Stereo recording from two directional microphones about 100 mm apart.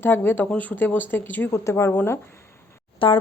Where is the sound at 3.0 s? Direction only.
65° left (ahead or behind).